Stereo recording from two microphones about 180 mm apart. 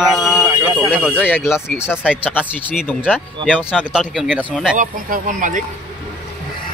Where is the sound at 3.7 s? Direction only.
5° right (ahead or behind).